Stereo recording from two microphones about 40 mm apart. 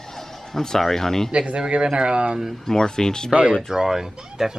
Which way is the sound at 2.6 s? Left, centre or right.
Centre.